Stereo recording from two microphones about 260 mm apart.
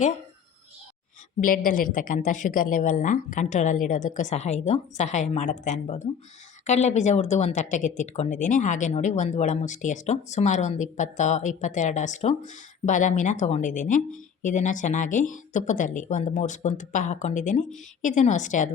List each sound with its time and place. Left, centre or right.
1.4 s speech: left